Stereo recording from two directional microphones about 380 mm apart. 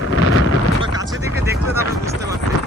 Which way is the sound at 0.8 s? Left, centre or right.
Centre.